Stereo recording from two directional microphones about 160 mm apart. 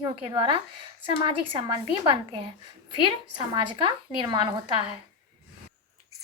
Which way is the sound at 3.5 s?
30° right (ahead or behind).